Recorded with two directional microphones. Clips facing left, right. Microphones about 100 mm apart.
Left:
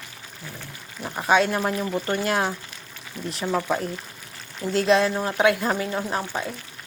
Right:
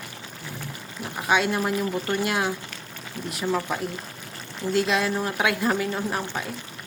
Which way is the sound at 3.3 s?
25° left (ahead or behind).